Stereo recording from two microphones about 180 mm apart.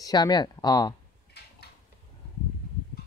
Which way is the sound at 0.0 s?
20° left (ahead or behind).